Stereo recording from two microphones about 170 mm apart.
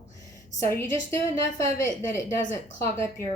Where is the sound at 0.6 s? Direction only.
15° left (ahead or behind).